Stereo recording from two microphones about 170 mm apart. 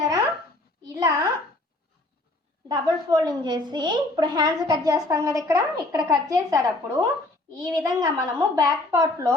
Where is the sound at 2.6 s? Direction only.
20° right (ahead or behind).